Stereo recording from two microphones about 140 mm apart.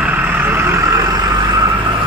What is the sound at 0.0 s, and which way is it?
Vehicle, 10° right (ahead or behind).